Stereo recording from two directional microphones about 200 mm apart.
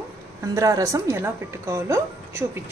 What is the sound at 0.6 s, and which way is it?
A woman's voice, 15° right (ahead or behind).